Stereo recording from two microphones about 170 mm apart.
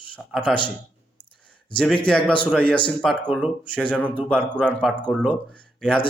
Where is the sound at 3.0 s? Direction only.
10° right (ahead or behind).